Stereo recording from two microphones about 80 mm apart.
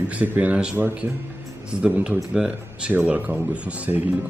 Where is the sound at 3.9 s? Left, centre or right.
Right.